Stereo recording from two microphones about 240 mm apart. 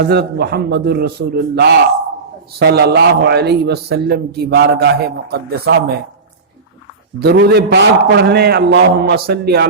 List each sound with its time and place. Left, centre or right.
0.0 s a man's voice: right
7.2 s a man's voice: right